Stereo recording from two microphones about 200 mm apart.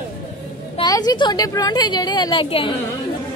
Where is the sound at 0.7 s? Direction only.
20° left (ahead or behind).